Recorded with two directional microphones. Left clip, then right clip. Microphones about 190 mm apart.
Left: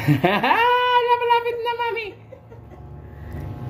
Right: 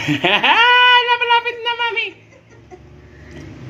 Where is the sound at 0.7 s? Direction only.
30° left (ahead or behind).